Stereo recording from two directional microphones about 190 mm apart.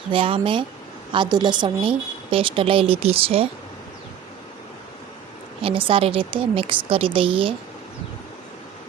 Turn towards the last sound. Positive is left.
turn(degrees=-30)  # may be behind; listen again after turning